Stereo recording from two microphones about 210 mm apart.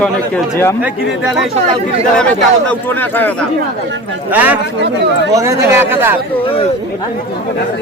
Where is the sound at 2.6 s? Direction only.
10° left (ahead or behind).